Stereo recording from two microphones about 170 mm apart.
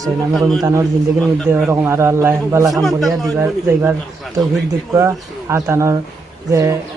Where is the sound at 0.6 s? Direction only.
15° right (ahead or behind).